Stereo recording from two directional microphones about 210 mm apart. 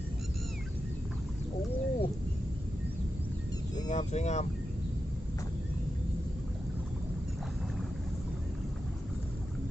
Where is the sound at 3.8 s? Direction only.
35° left (ahead or behind).